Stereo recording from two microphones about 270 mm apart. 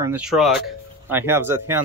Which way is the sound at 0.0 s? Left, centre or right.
Centre.